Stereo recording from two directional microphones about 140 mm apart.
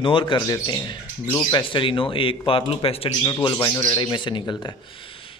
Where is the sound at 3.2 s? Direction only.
30° left (ahead or behind).